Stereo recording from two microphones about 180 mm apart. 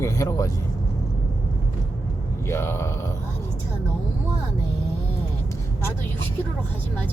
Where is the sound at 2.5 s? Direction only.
15° left (ahead or behind).